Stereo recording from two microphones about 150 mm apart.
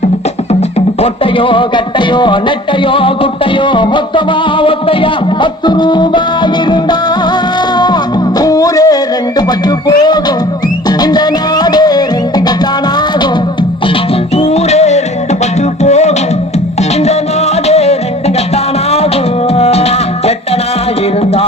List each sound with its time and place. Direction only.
1.0 s music: 35° left (ahead or behind)
8.4 s music: 25° left (ahead or behind)
14.3 s music: 45° left (ahead or behind)
17.7 s music: 45° left (ahead or behind)